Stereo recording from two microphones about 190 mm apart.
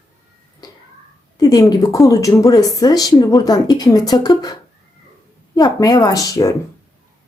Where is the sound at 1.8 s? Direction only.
15° left (ahead or behind).